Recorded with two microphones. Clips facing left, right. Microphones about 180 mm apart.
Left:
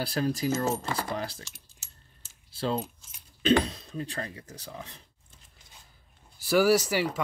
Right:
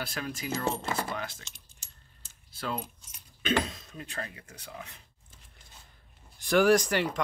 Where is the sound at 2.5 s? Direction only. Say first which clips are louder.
Left 5 dB; 30° left (ahead or behind).